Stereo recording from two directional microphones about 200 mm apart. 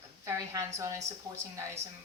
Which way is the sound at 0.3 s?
15° right (ahead or behind).